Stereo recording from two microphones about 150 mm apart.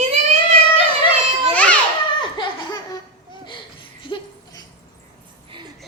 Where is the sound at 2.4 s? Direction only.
35° left (ahead or behind).